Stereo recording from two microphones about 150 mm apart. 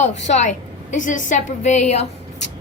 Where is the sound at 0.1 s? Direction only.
50° left (ahead or behind).